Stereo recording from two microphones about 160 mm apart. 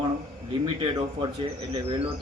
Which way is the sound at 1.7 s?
30° right (ahead or behind).